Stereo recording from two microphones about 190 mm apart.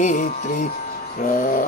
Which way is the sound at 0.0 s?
40° left (ahead or behind).